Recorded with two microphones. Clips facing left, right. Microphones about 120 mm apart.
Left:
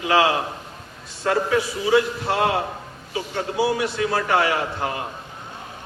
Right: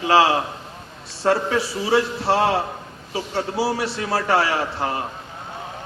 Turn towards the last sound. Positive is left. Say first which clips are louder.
# right 1 dB
turn(degrees=-35)  # may be behind; listen again after turning